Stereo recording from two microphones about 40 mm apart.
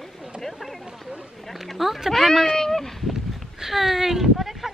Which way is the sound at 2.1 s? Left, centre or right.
Centre.